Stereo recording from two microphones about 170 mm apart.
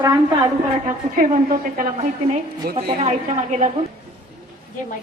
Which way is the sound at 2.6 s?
65° right (ahead or behind).